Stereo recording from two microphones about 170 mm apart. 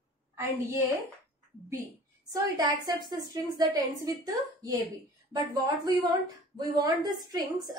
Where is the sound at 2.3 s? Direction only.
20° right (ahead or behind).